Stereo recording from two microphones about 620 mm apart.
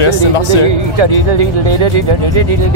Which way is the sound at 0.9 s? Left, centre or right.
Right.